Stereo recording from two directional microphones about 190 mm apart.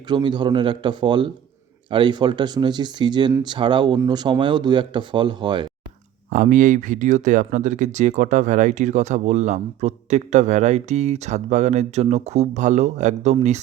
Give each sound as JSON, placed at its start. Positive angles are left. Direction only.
{"t": 0.1, "sound": "speech", "side_deg": -25}
{"t": 6.3, "sound": "speech", "side_deg": -45}